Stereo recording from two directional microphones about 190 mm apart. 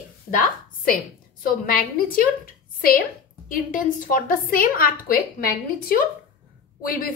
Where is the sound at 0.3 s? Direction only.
45° left (ahead or behind).